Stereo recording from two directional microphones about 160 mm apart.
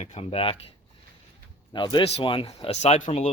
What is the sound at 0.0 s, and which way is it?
Speech, 40° left (ahead or behind).